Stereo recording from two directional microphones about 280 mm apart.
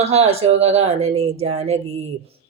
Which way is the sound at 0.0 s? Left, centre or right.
Right.